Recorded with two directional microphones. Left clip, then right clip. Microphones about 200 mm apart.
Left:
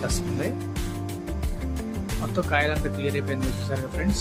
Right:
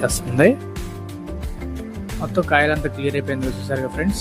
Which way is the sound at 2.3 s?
25° right (ahead or behind).